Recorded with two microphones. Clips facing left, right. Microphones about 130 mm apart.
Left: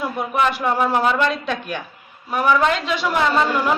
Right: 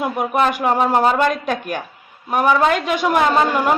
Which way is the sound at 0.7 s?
40° right (ahead or behind).